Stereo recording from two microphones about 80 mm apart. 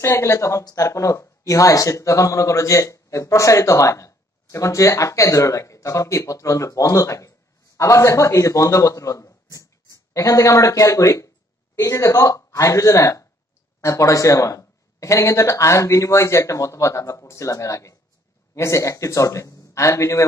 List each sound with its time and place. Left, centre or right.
0.0 s speech: left